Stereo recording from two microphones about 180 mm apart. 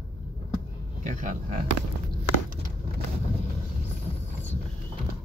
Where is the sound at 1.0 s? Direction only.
45° right (ahead or behind).